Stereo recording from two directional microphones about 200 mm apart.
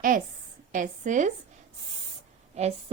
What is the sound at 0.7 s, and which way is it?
Speech, 40° right (ahead or behind).